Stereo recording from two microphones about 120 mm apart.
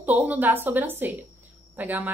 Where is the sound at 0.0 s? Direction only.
15° right (ahead or behind).